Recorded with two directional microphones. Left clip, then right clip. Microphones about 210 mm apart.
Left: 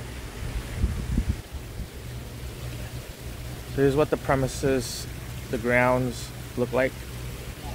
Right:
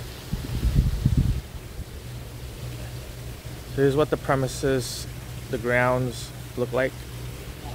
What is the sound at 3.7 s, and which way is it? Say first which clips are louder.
Speech: right 1 dB; 5° right (ahead or behind).